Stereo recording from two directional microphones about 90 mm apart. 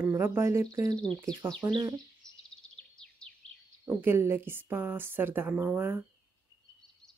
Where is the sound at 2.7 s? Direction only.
10° left (ahead or behind).